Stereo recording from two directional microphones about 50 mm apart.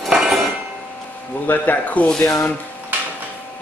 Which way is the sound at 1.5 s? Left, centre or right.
Left.